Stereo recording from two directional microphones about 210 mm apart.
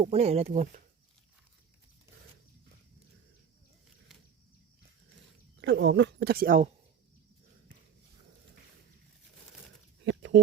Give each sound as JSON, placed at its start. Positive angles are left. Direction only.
{"t": 0.0, "sound": "speech", "side_deg": -30}
{"t": 5.5, "sound": "speech", "side_deg": -55}
{"t": 10.0, "sound": "a sound", "side_deg": -55}